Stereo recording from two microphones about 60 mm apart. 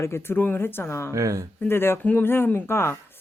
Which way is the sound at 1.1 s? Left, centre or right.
Right.